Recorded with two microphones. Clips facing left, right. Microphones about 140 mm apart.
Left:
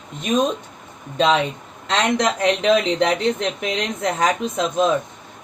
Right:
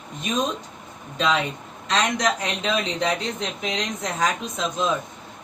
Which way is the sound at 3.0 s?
60° left (ahead or behind).